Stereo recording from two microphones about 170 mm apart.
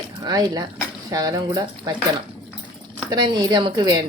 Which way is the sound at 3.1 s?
25° right (ahead or behind).